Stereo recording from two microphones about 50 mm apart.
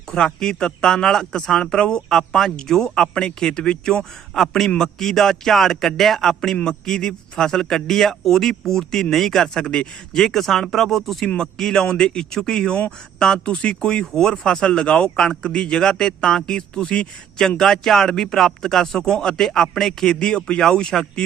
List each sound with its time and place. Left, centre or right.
0.1 s a man's voice: centre